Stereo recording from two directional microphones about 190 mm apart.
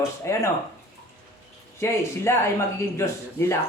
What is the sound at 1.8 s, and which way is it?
A man's voice, 15° left (ahead or behind).